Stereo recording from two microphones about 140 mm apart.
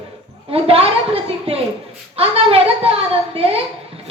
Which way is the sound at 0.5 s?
45° right (ahead or behind).